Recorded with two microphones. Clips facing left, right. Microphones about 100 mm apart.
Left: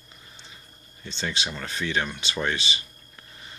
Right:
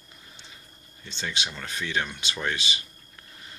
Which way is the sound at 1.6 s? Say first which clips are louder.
Left 2 dB; 5° right (ahead or behind).